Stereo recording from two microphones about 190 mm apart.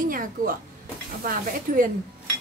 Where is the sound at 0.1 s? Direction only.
45° right (ahead or behind).